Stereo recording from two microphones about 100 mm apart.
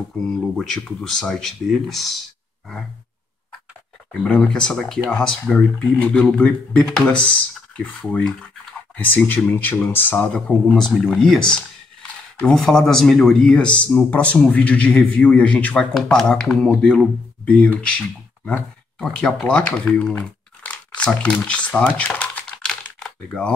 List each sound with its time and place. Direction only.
0.6 s speech: 5° left (ahead or behind)
4.1 s speech: 10° left (ahead or behind)
10.7 s speech: 5° left (ahead or behind)
19.1 s crumpling: 5° left (ahead or behind)